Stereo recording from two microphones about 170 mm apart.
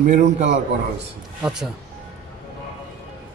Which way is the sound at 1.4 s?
5° right (ahead or behind).